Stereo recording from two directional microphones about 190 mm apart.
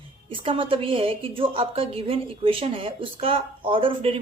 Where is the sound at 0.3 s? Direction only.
25° right (ahead or behind).